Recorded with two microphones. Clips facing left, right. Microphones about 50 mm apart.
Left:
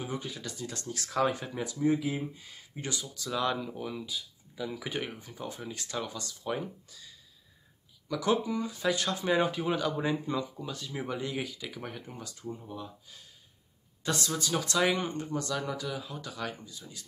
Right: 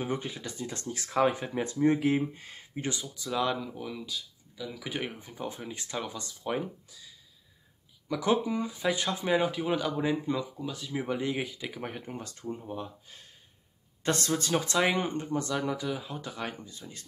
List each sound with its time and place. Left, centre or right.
0.0 s speech: right
1.6 s speech: right
2.7 s speech: right
3.3 s speech: centre
3.6 s speech: centre
4.8 s speech: centre
5.2 s speech: right
8.1 s speech: right
9.4 s speech: centre
11.1 s speech: right
12.6 s speech: right
14.5 s speech: right